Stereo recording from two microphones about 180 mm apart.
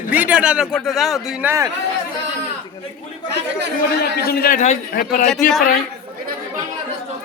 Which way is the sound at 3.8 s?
55° left (ahead or behind).